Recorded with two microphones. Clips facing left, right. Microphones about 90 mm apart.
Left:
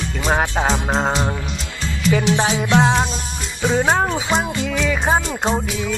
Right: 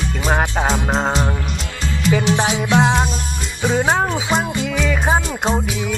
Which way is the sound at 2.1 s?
15° right (ahead or behind).